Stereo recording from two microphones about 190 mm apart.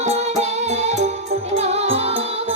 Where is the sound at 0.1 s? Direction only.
35° right (ahead or behind).